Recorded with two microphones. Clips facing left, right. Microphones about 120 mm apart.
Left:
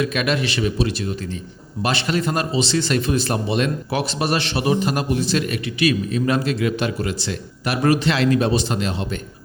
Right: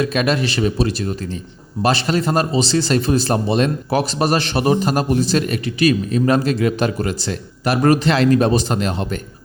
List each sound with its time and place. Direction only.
0.0 s a man's voice: 35° right (ahead or behind)